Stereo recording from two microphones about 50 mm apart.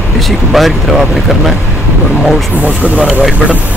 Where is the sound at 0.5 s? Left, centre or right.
Centre.